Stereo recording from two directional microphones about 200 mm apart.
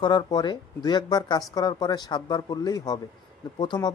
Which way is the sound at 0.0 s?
20° left (ahead or behind).